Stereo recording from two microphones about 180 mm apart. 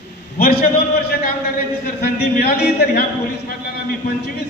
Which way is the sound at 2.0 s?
60° left (ahead or behind).